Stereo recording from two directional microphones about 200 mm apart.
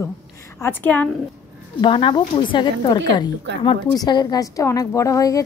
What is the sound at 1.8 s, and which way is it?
A woman's voice, 25° left (ahead or behind).